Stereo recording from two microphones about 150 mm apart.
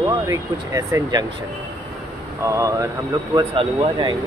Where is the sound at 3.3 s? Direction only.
35° right (ahead or behind).